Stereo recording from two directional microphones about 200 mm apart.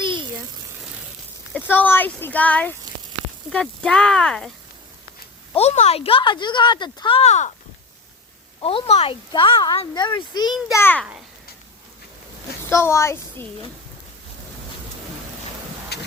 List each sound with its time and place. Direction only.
0.0 s a sound: 25° right (ahead or behind)
1.6 s speech: 10° left (ahead or behind)
5.5 s speech: 35° left (ahead or behind)
8.6 s speech: 30° left (ahead or behind)
10.7 s speech: 10° left (ahead or behind)
12.7 s speech: 15° left (ahead or behind)
15.9 s vehicle: 55° left (ahead or behind)